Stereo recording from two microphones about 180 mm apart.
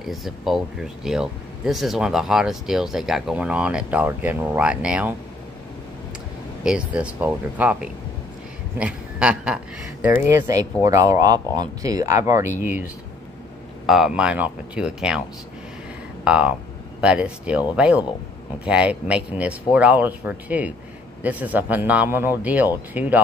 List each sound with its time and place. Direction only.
0.0 s speech: centre (ahead or behind)
6.6 s speech: 5° right (ahead or behind)
13.8 s speech: 5° right (ahead or behind)
16.3 s speech: 5° right (ahead or behind)